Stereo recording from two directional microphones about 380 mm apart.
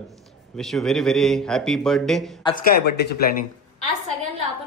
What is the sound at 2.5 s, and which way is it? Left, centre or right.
Speech, centre.